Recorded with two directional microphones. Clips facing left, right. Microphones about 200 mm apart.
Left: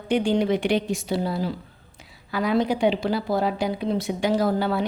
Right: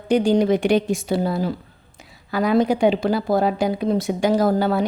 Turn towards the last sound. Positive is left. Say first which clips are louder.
# right 4 dB
turn(degrees=-45)  # may be behind; listen again after turning